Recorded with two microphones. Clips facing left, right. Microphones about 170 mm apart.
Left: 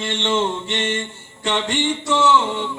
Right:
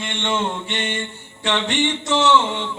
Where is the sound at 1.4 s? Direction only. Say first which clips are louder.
Even; 70° right (ahead or behind).